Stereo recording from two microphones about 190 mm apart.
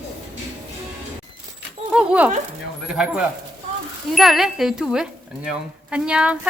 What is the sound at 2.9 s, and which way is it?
Speech, 5° right (ahead or behind).